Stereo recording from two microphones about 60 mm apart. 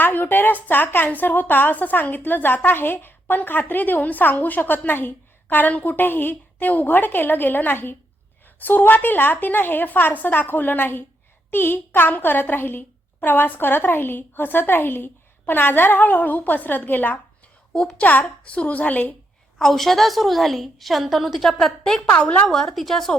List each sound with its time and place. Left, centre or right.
0.0 s a woman's voice: left
19.5 s a woman's voice: centre
21.4 s a woman's voice: centre